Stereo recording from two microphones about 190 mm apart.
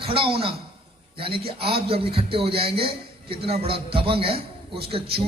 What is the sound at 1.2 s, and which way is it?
A man's voice, 30° right (ahead or behind).